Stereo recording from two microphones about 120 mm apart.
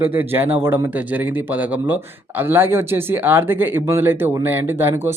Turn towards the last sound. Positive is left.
turn(degrees=-20)  # may be behind; listen again after turning